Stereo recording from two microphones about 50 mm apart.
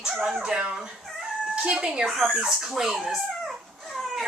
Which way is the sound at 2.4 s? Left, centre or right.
Centre.